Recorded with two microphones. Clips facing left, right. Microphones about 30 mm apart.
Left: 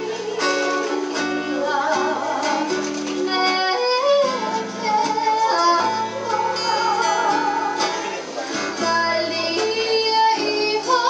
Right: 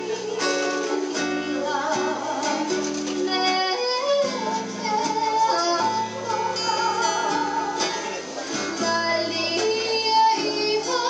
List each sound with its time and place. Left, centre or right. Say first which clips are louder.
0.4 s music: left 4 dB; centre
1.7 s music: left 5 dB; centre